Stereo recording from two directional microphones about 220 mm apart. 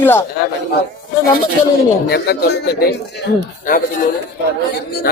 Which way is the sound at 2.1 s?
45° left (ahead or behind).